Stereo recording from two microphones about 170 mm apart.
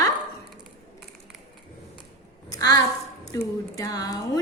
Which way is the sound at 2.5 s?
20° left (ahead or behind).